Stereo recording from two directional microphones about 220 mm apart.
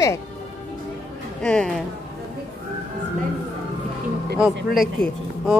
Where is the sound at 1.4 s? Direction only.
5° left (ahead or behind).